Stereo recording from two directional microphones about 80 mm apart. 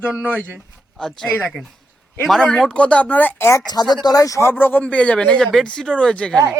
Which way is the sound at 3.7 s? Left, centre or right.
Left.